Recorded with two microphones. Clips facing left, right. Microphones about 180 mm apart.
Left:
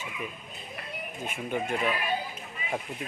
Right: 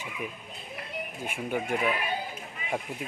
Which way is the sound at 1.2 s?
10° right (ahead or behind).